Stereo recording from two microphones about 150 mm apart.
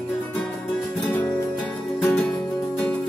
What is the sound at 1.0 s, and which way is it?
Music, 10° left (ahead or behind).